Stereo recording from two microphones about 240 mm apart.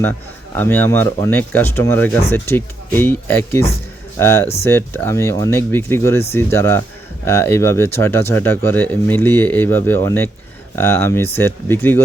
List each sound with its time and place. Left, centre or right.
0.5 s speech: centre